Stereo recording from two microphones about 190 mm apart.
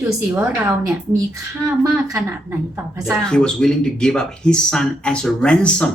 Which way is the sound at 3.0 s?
5° left (ahead or behind).